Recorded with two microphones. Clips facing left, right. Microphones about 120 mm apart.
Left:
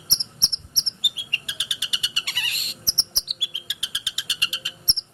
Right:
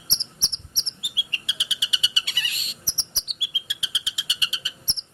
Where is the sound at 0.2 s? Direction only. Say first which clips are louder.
Left 1 dB; 60° left (ahead or behind).